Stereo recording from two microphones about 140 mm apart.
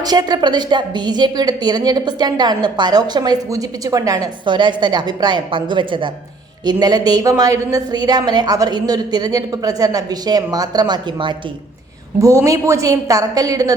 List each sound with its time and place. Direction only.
0.0 s a woman's voice: 30° right (ahead or behind)
12.2 s a woman's voice: 20° right (ahead or behind)